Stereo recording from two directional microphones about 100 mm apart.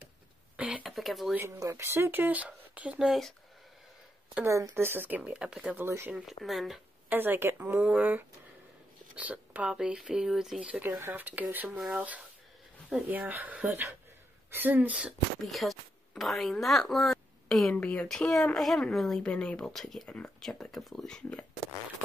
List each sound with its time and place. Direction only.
0.6 s a sound: 10° right (ahead or behind)
0.8 s a sound: centre (ahead or behind)
1.6 s speech: 30° right (ahead or behind); by 3.1 s 15° right (ahead or behind)
3.1 s speech: centre (ahead or behind)
4.5 s speech: 30° right (ahead or behind); by 5.8 s 10° right (ahead or behind)
5.8 s speech: 25° right (ahead or behind)
6.1 s speech: centre (ahead or behind)
7.1 s speech: 20° right (ahead or behind)
10.8 s speech: 20° right (ahead or behind)
11.7 s speech: centre (ahead or behind)
13.1 s speech: 15° right (ahead or behind)
15.4 s speech: centre (ahead or behind)